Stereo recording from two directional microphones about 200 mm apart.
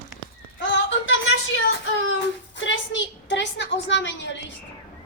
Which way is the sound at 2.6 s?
70° left (ahead or behind).